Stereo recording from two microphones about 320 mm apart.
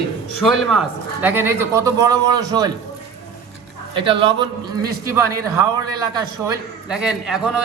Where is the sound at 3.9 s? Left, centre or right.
Centre.